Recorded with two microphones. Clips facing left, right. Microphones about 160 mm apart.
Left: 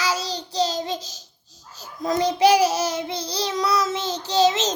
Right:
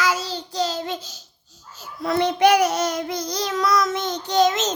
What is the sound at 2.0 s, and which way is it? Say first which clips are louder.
A child's voice: right 1 dB; 40° left (ahead or behind).